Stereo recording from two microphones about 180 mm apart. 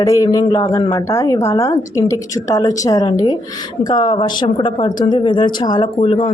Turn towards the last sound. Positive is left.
turn(degrees=30)  # may be behind; listen again after turning